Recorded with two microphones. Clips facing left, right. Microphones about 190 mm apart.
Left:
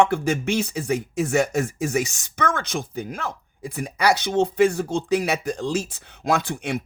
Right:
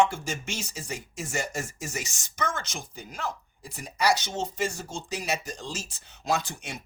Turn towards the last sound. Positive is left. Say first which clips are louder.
# left 7 dB
turn(degrees=60)  # may be behind; listen again after turning